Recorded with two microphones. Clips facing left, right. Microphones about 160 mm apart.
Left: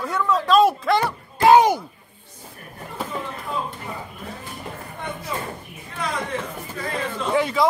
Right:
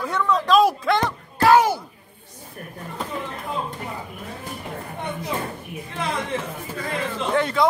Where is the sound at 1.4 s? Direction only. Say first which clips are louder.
Left 2 dB; 20° left (ahead or behind).